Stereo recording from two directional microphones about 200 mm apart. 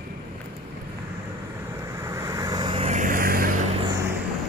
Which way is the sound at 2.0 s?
15° right (ahead or behind).